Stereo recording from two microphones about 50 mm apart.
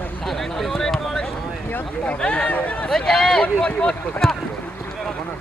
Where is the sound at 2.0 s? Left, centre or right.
Left.